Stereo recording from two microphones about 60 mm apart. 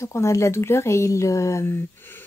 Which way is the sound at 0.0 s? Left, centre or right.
Left.